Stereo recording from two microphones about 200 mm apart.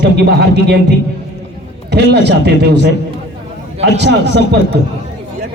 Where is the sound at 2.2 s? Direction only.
60° right (ahead or behind).